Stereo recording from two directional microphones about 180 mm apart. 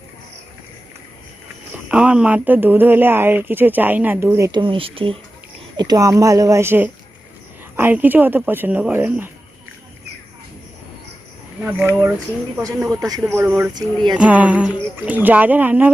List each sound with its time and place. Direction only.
1.9 s speech: 5° right (ahead or behind)
11.6 s speech: 10° right (ahead or behind)
13.3 s speech: 10° right (ahead or behind)
13.7 s speech: 25° right (ahead or behind)
14.2 s speech: 10° right (ahead or behind)